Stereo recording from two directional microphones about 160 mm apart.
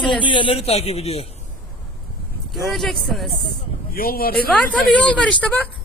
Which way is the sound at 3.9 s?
65° left (ahead or behind).